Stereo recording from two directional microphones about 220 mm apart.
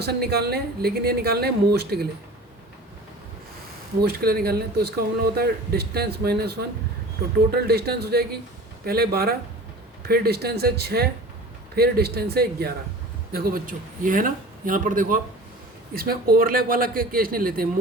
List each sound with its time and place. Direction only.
0.0 s speech: 45° right (ahead or behind)
4.0 s a man's voice: 45° right (ahead or behind)